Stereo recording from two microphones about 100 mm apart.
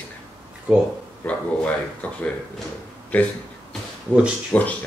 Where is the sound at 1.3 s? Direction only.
15° left (ahead or behind).